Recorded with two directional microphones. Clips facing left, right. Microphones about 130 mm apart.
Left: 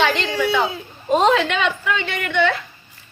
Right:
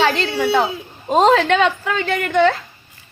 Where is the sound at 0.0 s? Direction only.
40° right (ahead or behind).